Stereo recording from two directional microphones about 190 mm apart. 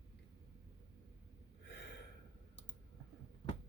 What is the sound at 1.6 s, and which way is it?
Gasp, 60° left (ahead or behind).